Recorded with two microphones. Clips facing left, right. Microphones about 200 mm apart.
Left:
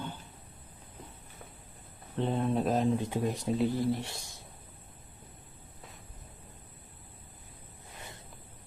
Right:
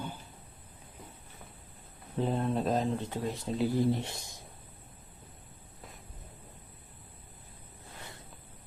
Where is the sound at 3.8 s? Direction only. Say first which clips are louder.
Right 2 dB; 20° right (ahead or behind).